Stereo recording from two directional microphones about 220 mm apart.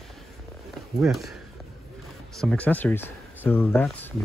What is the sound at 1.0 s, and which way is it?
Speech, centre (ahead or behind).